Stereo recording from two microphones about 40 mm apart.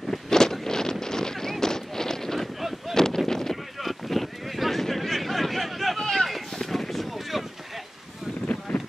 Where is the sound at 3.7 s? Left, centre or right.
Centre.